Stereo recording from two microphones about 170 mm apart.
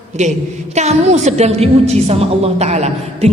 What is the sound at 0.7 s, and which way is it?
A woman's voice, 40° right (ahead or behind).